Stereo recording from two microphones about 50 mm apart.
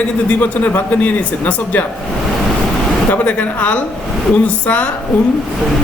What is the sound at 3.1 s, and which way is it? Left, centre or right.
Speech, left.